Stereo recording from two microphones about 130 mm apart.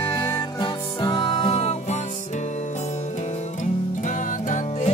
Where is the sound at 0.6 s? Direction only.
35° left (ahead or behind); by 2.0 s 55° left (ahead or behind).